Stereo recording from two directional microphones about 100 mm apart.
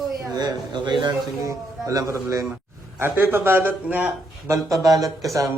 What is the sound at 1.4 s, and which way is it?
A man's voice, 30° right (ahead or behind).